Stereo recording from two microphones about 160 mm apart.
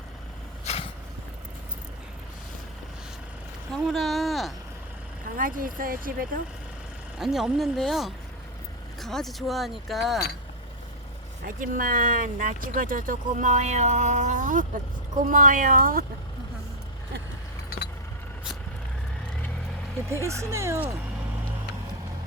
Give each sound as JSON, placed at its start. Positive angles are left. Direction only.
{"t": 0.6, "sound": "vehicle", "side_deg": 40}
{"t": 3.7, "sound": "speech", "side_deg": 0}
{"t": 5.4, "sound": "speech", "side_deg": -60}
{"t": 7.2, "sound": "speech", "side_deg": -5}
{"t": 11.4, "sound": "speech", "side_deg": -60}
{"t": 20.2, "sound": "speech", "side_deg": -20}